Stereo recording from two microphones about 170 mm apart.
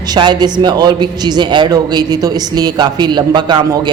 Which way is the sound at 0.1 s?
25° right (ahead or behind).